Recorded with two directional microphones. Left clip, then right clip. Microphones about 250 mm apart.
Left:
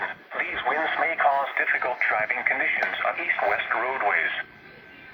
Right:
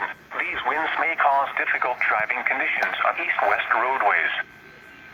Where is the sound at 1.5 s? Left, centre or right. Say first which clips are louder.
Right 1 dB; centre.